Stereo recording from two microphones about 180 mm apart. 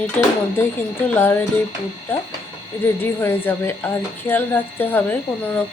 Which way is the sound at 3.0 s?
15° left (ahead or behind).